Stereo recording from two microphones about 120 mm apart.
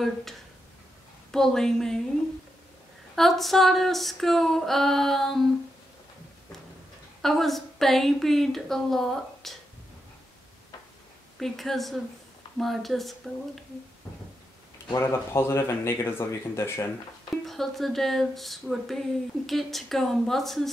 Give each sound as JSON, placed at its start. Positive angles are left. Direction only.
{"t": 0.0, "sound": "speech", "side_deg": 0}
{"t": 3.2, "sound": "speech", "side_deg": 0}
{"t": 7.2, "sound": "speech", "side_deg": 0}
{"t": 11.3, "sound": "speech", "side_deg": 0}
{"t": 15.0, "sound": "speech", "side_deg": 20}
{"t": 17.5, "sound": "speech", "side_deg": 0}